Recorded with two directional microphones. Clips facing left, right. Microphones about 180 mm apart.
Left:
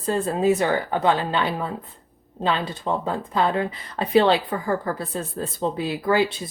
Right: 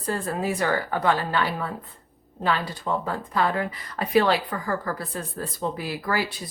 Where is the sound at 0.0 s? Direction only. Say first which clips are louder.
Left 6 dB; 25° left (ahead or behind).